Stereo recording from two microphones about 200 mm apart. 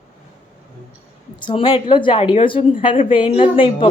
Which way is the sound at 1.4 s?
25° left (ahead or behind).